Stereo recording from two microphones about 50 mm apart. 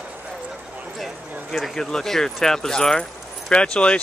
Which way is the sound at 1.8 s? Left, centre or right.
Centre.